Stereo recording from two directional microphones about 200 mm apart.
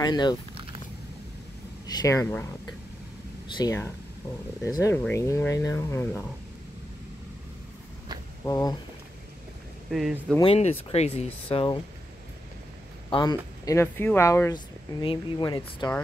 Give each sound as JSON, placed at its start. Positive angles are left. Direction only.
{"t": 0.0, "sound": "speech", "side_deg": 20}
{"t": 1.9, "sound": "speech", "side_deg": 20}
{"t": 3.5, "sound": "speech", "side_deg": 15}
{"t": 8.5, "sound": "speech", "side_deg": 15}
{"t": 9.8, "sound": "speech", "side_deg": 0}
{"t": 10.4, "sound": "speech", "side_deg": 30}
{"t": 13.1, "sound": "speech", "side_deg": 20}